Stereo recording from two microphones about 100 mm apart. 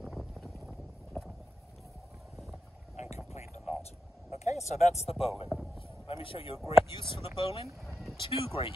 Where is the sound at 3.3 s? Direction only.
90° left.